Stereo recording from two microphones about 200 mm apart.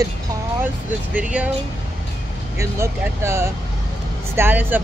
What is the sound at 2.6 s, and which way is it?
Speech, 15° right (ahead or behind).